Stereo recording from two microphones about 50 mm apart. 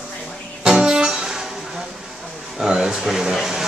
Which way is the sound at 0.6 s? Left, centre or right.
Centre.